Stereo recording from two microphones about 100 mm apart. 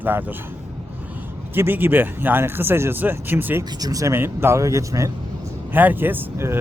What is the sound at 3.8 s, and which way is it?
Speech, 35° right (ahead or behind).